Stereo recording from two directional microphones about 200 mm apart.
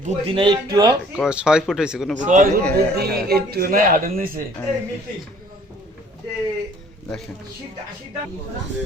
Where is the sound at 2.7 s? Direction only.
55° right (ahead or behind).